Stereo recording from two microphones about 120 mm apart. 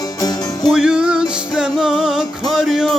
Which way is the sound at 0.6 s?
5° right (ahead or behind).